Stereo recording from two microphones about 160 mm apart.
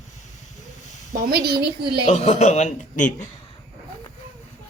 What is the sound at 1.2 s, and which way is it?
Speech, 80° right.